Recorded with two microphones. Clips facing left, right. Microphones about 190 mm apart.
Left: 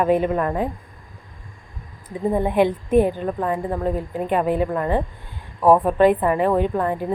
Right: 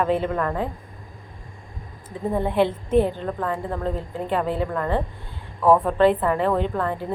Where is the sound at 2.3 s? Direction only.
15° left (ahead or behind).